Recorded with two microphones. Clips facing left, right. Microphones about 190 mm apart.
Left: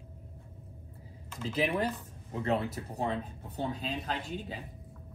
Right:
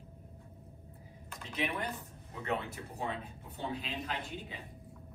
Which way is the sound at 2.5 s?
35° left (ahead or behind).